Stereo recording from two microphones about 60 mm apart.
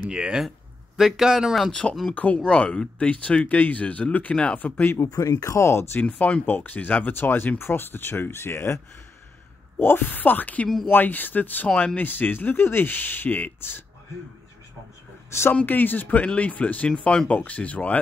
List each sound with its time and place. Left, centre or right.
0.1 s speech: centre
0.9 s speech: centre
1.7 s speech: centre
4.9 s speech: left
5.9 s speech: left
9.8 s speech: left
15.6 s speech: left